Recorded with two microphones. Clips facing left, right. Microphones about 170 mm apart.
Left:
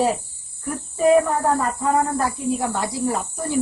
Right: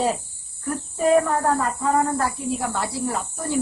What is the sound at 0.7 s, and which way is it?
Speech, 10° left (ahead or behind).